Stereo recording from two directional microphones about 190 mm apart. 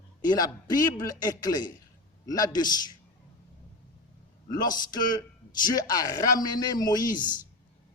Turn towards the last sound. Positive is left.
turn(degrees=20)  # may be behind; listen again after turning